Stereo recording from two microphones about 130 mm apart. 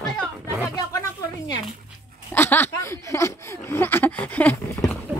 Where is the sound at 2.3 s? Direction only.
15° left (ahead or behind).